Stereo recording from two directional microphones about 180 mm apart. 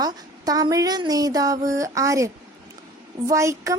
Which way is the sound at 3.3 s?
15° right (ahead or behind).